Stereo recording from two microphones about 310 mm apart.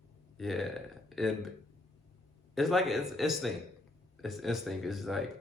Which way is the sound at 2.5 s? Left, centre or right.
Centre.